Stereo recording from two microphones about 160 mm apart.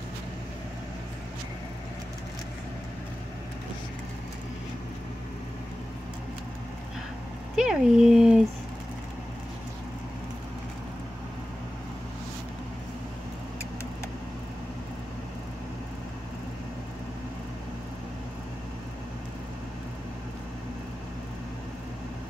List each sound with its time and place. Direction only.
7.5 s dog: 5° right (ahead or behind)